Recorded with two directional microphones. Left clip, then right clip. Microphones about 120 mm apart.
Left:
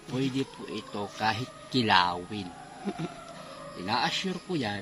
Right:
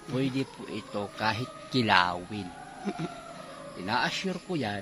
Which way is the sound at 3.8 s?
25° right (ahead or behind).